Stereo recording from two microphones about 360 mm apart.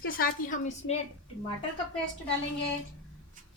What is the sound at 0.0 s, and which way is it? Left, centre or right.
Speech, left.